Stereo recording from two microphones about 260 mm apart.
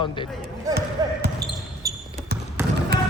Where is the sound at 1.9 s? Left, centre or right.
Centre.